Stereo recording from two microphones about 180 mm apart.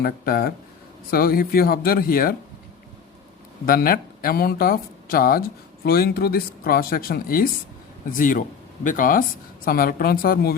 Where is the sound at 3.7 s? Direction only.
55° left (ahead or behind).